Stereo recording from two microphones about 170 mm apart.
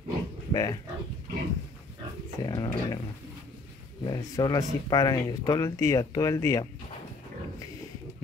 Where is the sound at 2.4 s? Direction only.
25° left (ahead or behind).